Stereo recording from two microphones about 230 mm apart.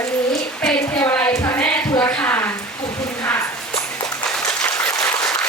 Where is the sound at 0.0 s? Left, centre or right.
Centre.